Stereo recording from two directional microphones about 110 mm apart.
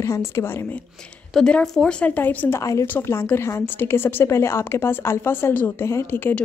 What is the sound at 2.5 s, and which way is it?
A woman's voice, 30° left (ahead or behind).